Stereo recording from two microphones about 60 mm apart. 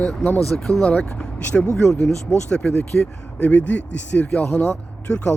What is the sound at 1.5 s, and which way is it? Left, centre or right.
Speech, centre.